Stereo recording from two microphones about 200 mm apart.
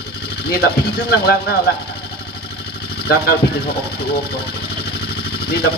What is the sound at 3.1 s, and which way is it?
Speech, 50° left (ahead or behind).